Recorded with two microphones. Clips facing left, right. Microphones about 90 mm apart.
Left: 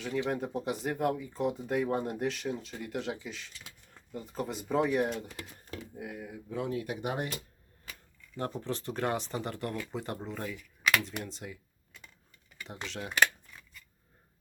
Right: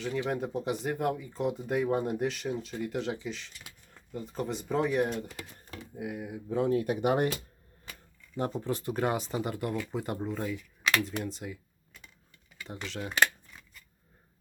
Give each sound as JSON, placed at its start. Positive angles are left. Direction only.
{"t": 0.0, "sound": "speech", "side_deg": 0}
{"t": 6.5, "sound": "speech", "side_deg": -35}
{"t": 8.4, "sound": "speech", "side_deg": -15}
{"t": 12.6, "sound": "speech", "side_deg": 0}